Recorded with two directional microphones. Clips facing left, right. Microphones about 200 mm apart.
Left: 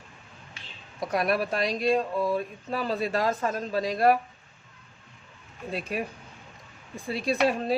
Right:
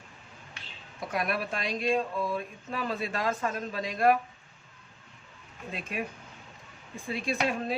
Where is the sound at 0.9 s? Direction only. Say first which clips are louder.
Left 5 dB; 40° left (ahead or behind).